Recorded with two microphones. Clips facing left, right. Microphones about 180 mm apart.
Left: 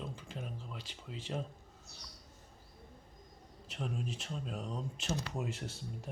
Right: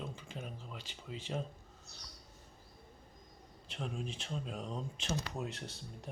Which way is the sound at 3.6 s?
5° left (ahead or behind).